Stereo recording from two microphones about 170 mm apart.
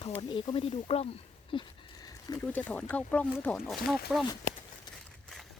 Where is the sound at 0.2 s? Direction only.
25° left (ahead or behind).